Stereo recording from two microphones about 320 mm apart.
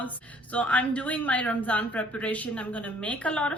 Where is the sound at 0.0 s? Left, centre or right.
Centre.